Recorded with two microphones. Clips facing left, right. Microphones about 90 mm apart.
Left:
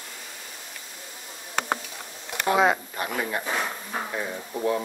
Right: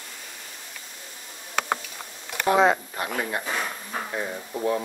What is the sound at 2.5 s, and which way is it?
Speech, 10° left (ahead or behind).